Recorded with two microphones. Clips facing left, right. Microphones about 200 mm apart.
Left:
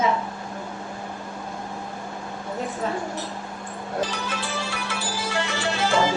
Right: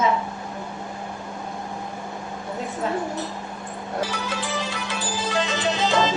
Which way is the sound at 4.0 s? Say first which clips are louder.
Right 1 dB; 10° right (ahead or behind).